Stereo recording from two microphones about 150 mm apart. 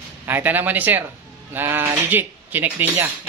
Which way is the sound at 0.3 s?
15° right (ahead or behind).